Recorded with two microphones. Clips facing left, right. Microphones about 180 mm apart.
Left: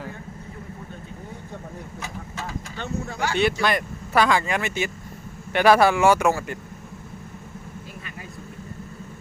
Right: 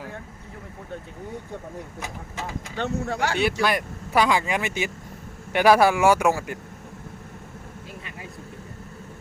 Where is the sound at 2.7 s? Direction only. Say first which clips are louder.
Right 5 dB; 70° right (ahead or behind).